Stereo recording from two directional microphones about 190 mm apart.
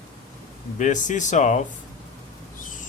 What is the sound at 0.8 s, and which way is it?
Speech, 40° left (ahead or behind).